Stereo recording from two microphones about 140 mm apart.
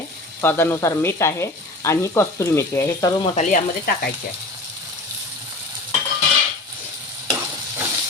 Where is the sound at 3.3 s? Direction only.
80° left.